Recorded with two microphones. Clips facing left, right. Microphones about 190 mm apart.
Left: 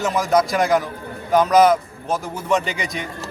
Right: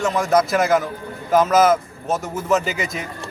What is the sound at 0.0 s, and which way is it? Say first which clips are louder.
A man's voice: even; centre (ahead or behind).